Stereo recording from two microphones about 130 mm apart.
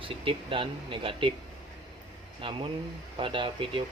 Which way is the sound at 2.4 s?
40° right (ahead or behind).